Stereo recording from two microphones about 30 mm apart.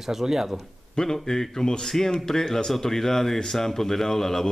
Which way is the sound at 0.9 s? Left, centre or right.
Centre.